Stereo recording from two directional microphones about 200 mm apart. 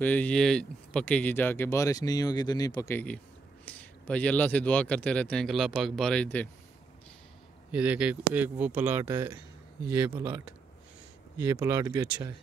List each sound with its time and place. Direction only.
0.0 s speech: 5° left (ahead or behind)
7.7 s speech: 5° right (ahead or behind)